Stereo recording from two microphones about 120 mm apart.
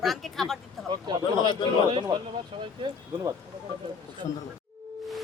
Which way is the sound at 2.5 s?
50° right (ahead or behind).